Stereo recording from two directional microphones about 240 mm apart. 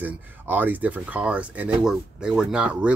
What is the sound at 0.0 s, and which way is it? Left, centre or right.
Speech, centre.